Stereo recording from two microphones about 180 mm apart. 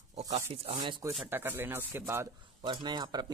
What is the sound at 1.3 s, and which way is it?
Speech, 10° right (ahead or behind).